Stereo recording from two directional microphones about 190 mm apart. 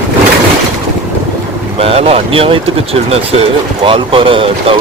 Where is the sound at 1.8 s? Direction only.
30° right (ahead or behind).